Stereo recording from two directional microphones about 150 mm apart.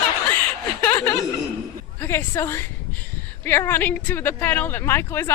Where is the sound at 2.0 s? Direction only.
15° left (ahead or behind).